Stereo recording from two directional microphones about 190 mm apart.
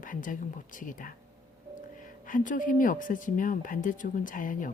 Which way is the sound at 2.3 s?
45° left (ahead or behind).